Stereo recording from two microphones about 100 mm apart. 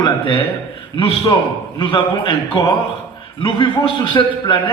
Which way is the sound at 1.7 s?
55° left (ahead or behind).